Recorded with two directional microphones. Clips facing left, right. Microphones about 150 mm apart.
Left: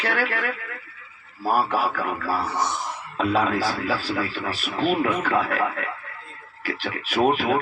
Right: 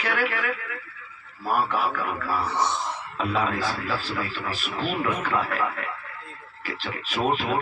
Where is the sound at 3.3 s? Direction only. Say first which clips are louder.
Left 4 dB; 40° left (ahead or behind).